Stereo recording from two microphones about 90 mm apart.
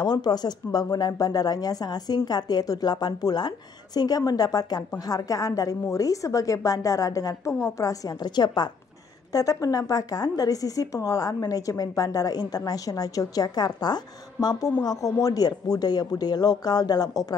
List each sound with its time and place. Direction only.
0.0 s speech: 50° left (ahead or behind)